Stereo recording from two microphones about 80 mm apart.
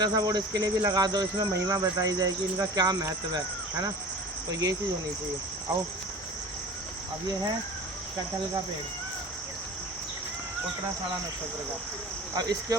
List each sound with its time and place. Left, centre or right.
0.0 s cricket: right
3.3 s speech: right
12.4 s cricket: right